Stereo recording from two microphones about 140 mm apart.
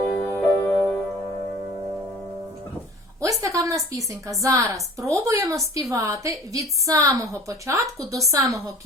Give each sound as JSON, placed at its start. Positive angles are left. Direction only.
{"t": 0.1, "sound": "music", "side_deg": 5}
{"t": 3.2, "sound": "a woman's voice", "side_deg": -25}